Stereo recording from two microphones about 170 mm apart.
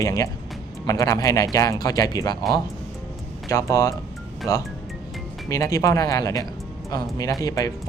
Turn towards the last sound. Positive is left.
turn(degrees=20)  # may be behind; listen again after turning